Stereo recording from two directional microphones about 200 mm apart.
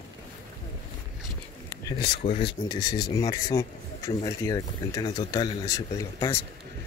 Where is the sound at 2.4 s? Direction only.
25° left (ahead or behind).